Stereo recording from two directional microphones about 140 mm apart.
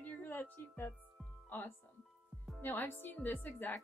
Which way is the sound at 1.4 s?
15° left (ahead or behind).